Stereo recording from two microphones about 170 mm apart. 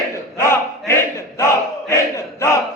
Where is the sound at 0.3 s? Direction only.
15° left (ahead or behind).